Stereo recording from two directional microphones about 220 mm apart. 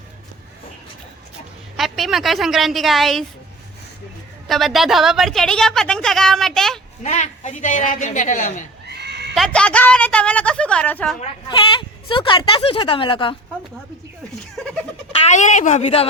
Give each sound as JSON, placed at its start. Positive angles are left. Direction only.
{"t": 1.7, "sound": "a woman's voice", "side_deg": 0}
{"t": 4.4, "sound": "a woman's voice", "side_deg": 0}
{"t": 7.0, "sound": "a woman's voice", "side_deg": 30}
{"t": 8.9, "sound": "neigh", "side_deg": -50}
{"t": 9.3, "sound": "a woman's voice", "side_deg": 0}
{"t": 11.4, "sound": "speech", "side_deg": 20}
{"t": 15.2, "sound": "a woman's voice", "side_deg": 35}